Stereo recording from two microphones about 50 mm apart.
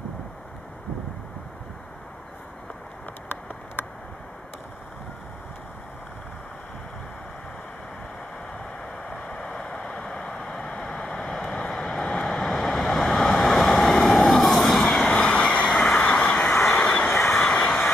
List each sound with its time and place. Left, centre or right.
9.1 s vehicle: centre
10.7 s a sound: centre
11.4 s vehicle: centre
15.0 s vehicle: left
15.7 s vehicle: centre
16.0 s vehicle: left
16.3 s vehicle: centre
16.8 s vehicle: left
17.1 s vehicle: centre